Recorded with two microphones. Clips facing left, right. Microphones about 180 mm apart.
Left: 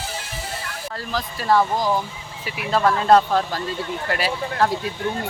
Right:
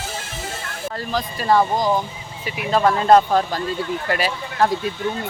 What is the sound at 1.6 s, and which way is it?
Speech, 20° right (ahead or behind).